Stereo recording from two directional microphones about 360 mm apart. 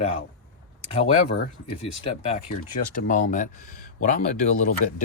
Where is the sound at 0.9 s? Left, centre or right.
Centre.